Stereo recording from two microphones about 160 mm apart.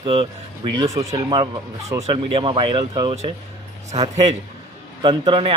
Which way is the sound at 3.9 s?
40° right (ahead or behind).